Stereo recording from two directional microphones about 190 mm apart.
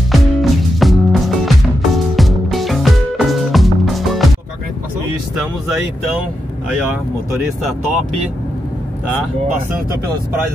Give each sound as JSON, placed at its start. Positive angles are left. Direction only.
{"t": 0.1, "sound": "music", "side_deg": 0}